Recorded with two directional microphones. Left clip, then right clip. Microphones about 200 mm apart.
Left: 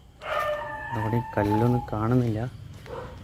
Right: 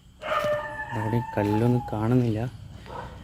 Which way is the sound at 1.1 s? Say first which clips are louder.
Left 1 dB; 10° right (ahead or behind).